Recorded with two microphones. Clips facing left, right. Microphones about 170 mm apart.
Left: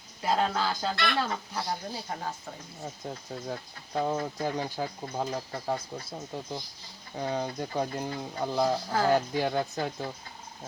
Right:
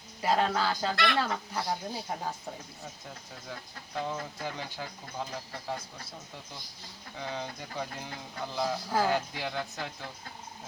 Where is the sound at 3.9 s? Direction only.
45° left (ahead or behind).